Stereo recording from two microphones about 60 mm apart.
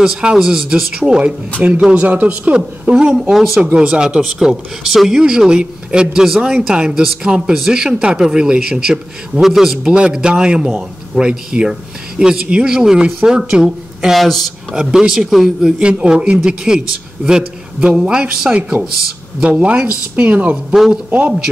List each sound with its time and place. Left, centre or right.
0.0 s speech: centre
3.3 s speech: centre
3.7 s speech: centre
14.1 s speech: centre
14.8 s speech: centre
15.8 s speech: centre
20.7 s speech: centre